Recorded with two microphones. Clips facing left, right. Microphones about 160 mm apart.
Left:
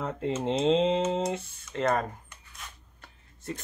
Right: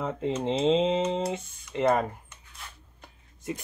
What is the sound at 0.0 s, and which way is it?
Speech, centre (ahead or behind).